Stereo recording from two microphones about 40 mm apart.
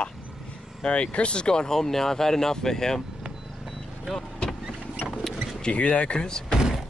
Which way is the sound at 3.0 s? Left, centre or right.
Centre.